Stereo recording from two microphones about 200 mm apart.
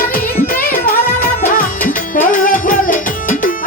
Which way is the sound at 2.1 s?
45° left (ahead or behind).